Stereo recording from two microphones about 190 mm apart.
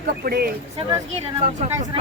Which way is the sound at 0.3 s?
55° right (ahead or behind).